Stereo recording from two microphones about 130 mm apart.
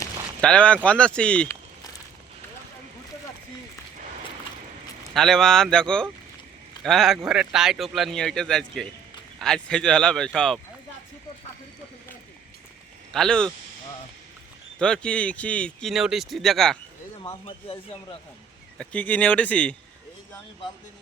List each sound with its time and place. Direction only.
0.4 s speech: 10° left (ahead or behind)
5.1 s speech: 5° left (ahead or behind)
13.1 s speech: 5° left (ahead or behind)
14.8 s speech: 5° left (ahead or behind)
17.4 s speech: 45° left (ahead or behind)
18.8 s speech: 10° left (ahead or behind)